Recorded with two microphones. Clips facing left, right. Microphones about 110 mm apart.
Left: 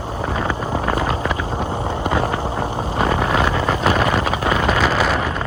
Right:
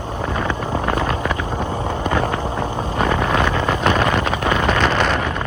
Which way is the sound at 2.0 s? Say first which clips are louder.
Even; 10° left (ahead or behind).